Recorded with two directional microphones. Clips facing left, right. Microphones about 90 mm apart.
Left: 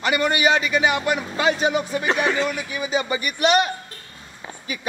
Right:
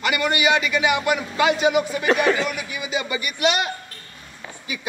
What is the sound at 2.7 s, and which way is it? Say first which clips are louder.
Speech: left 3 dB; 40° left (ahead or behind).